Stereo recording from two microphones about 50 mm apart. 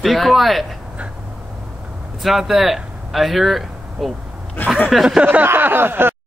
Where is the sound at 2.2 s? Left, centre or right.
Centre.